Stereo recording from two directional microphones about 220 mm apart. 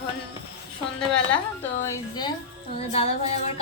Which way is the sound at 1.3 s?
10° left (ahead or behind).